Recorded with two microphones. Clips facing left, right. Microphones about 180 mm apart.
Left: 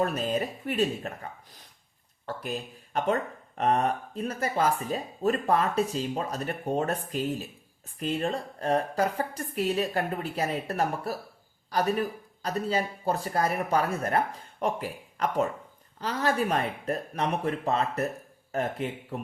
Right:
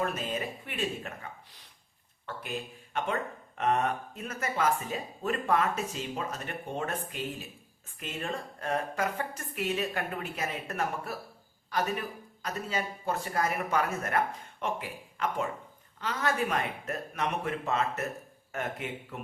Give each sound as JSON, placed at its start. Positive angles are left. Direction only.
{"t": 0.0, "sound": "speech", "side_deg": 35}
{"t": 2.2, "sound": "speech", "side_deg": 35}